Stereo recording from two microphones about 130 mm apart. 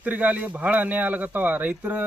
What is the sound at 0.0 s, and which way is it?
Speech, 10° right (ahead or behind).